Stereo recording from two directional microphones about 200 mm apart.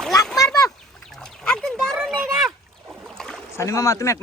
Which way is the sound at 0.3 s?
20° left (ahead or behind).